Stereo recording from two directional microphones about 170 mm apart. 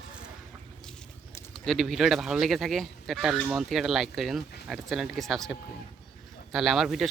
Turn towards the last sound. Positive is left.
turn(degrees=0)  # may be behind; listen again after turning